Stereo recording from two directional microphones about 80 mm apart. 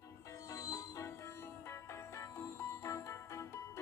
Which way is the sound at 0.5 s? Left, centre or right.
Left.